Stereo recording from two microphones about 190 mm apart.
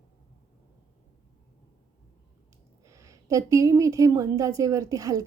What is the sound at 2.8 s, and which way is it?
A woman's voice, 15° right (ahead or behind).